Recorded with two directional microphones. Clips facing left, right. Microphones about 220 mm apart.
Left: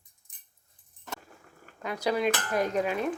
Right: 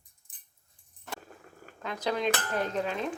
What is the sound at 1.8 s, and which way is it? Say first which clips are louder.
Speech: left 3 dB; 10° left (ahead or behind).